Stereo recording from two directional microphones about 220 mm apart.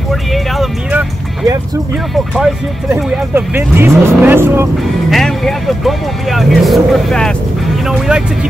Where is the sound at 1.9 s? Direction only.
Centre (ahead or behind).